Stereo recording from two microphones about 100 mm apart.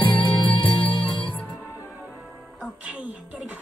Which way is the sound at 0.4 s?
55° left (ahead or behind).